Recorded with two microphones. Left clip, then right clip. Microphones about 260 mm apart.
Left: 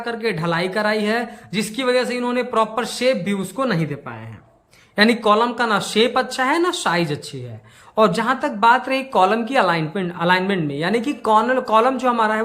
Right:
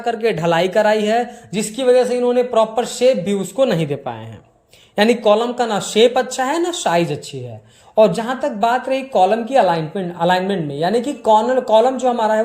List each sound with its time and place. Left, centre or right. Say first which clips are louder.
0.0 s a man's voice: right 5 dB; centre
11.2 s speech: right 3 dB; left
11.5 s a man's voice: right 3 dB; centre